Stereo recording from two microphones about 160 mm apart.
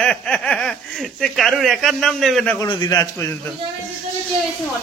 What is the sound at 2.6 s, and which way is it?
Speech, 25° left (ahead or behind).